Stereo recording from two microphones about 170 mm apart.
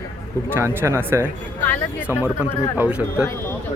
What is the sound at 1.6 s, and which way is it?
Speech, 10° left (ahead or behind).